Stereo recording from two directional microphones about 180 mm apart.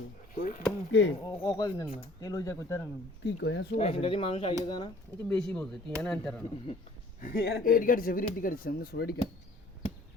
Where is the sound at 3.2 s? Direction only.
75° left (ahead or behind).